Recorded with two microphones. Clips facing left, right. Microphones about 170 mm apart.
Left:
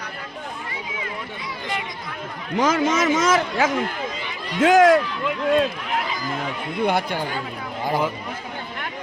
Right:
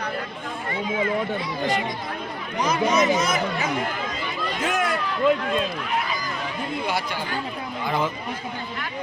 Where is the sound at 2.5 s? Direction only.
90° left.